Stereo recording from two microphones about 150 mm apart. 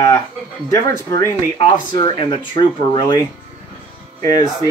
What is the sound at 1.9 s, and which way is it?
Speech, 30° left (ahead or behind).